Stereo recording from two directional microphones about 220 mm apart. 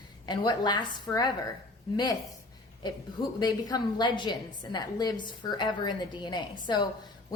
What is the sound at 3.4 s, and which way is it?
A woman's voice, 20° left (ahead or behind).